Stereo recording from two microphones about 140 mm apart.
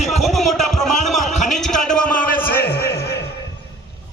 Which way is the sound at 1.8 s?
5° left (ahead or behind).